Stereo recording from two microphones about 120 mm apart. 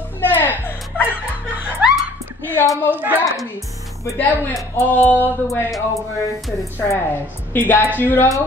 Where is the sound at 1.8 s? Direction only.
10° right (ahead or behind).